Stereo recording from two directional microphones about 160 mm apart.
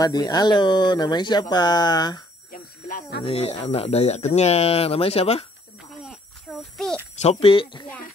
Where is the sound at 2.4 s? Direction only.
55° left (ahead or behind).